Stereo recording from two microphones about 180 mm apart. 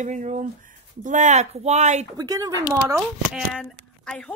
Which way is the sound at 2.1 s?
20° right (ahead or behind).